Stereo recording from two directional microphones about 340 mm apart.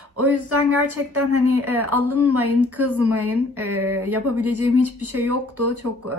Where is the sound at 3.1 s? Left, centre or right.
Right.